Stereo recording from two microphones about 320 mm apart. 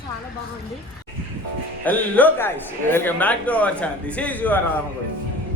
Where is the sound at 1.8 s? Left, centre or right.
Centre.